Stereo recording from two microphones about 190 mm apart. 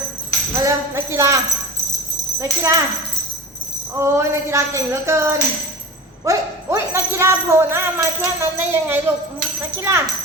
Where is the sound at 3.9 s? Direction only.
15° right (ahead or behind).